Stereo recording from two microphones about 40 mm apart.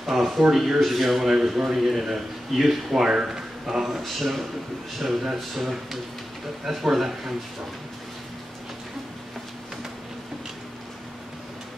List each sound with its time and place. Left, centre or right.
0.0 s a man's voice: centre
2.9 s a man's voice: centre